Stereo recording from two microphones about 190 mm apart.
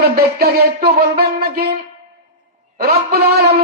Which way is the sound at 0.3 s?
55° right (ahead or behind).